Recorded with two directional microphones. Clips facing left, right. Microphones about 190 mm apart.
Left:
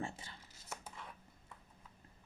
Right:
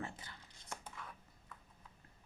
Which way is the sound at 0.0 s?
25° left (ahead or behind).